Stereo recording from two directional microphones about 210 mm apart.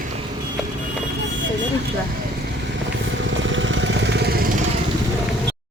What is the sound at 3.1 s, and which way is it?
Vehicle, 60° right (ahead or behind).